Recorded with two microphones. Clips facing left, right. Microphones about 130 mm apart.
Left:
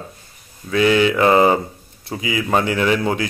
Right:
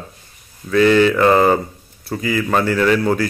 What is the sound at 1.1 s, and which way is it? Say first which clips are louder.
Speech: right 1 dB; 15° left (ahead or behind).